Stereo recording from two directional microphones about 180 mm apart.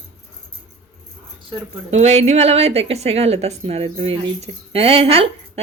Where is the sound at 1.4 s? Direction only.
35° right (ahead or behind).